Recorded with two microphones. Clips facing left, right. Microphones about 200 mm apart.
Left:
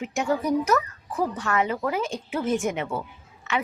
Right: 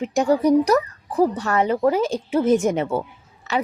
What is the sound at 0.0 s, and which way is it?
A woman's voice, 35° right (ahead or behind).